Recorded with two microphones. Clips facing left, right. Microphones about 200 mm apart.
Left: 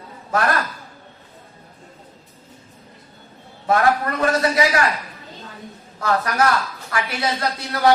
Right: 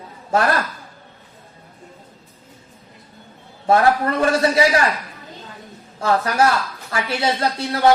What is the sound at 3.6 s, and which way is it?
Speech, 30° right (ahead or behind).